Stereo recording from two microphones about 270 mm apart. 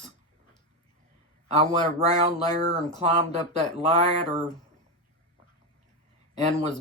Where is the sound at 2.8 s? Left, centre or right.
Right.